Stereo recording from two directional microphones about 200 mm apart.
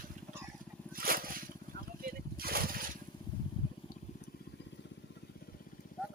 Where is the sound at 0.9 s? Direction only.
45° right (ahead or behind).